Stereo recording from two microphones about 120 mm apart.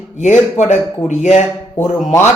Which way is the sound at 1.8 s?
20° left (ahead or behind).